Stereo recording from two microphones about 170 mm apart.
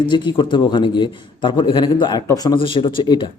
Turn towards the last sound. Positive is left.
turn(degrees=30)  # may be behind; listen again after turning